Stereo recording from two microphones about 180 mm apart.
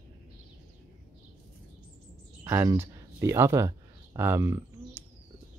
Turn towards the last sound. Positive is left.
turn(degrees=-15)  # may be behind; listen again after turning